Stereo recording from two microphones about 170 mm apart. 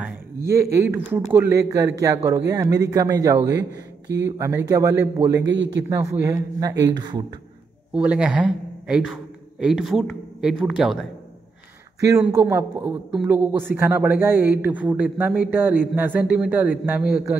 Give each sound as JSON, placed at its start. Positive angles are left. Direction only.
{"t": 0.0, "sound": "a man's voice", "side_deg": -15}
{"t": 5.5, "sound": "a man's voice", "side_deg": -90}
{"t": 5.9, "sound": "a man's voice", "side_deg": -15}
{"t": 7.9, "sound": "a man's voice", "side_deg": -5}
{"t": 12.0, "sound": "a man's voice", "side_deg": -15}